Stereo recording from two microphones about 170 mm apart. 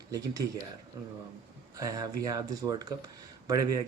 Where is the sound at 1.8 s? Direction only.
20° right (ahead or behind).